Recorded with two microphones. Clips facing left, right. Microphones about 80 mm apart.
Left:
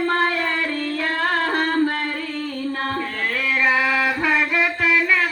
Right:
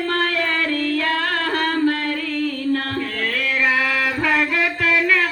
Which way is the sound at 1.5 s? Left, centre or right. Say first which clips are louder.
Right 1 dB; left.